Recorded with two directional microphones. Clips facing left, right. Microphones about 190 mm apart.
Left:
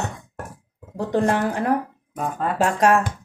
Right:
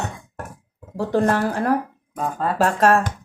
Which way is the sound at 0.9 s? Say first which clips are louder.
Right 1 dB; 15° left (ahead or behind).